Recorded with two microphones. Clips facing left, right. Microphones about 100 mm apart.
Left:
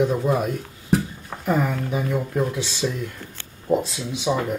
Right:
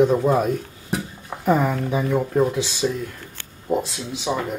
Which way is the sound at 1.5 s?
35° right (ahead or behind).